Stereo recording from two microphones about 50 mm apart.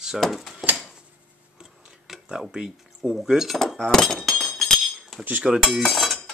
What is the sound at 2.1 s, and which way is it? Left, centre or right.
Speech, centre.